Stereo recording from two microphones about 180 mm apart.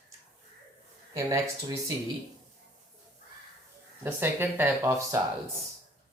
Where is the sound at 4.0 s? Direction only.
10° right (ahead or behind).